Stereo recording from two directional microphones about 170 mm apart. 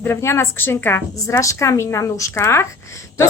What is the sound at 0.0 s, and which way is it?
A woman's voice, 15° left (ahead or behind).